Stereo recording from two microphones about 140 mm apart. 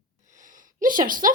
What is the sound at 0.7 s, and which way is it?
Speech, 75° right (ahead or behind).